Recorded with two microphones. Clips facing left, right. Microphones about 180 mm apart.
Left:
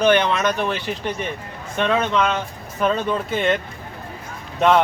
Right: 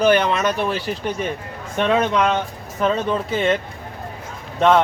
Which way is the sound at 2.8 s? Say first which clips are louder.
Right 1 dB; centre (ahead or behind).